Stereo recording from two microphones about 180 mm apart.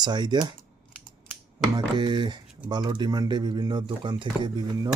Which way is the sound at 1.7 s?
25° right (ahead or behind).